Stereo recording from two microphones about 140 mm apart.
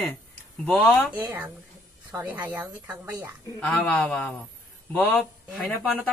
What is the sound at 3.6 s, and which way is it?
Speech, 10° left (ahead or behind).